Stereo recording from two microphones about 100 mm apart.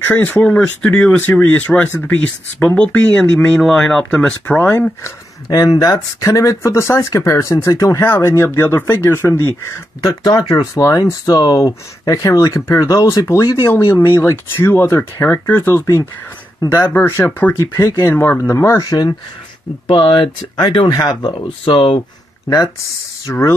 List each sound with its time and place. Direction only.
0.1 s speech: 15° left (ahead or behind)
5.0 s speech: 40° left (ahead or behind); by 9.5 s 25° left (ahead or behind)
10.2 s speech: 40° left (ahead or behind); by 17.6 s 20° left (ahead or behind)
17.6 s speech: 35° left (ahead or behind)
18.1 s speech: 20° left (ahead or behind); by 19.1 s 40° left (ahead or behind)
19.9 s speech: 55° left (ahead or behind)
23.2 s speech: 25° left (ahead or behind)